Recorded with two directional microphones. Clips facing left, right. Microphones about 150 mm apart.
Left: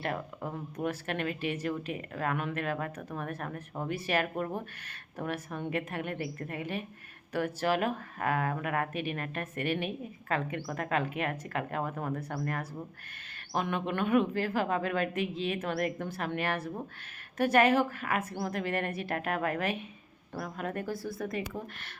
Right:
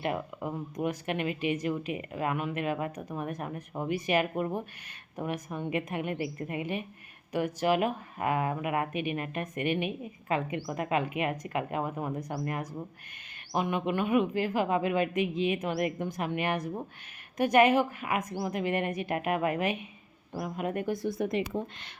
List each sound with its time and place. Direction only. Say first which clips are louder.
0.0 s speech: right 3 dB; 10° right (ahead or behind)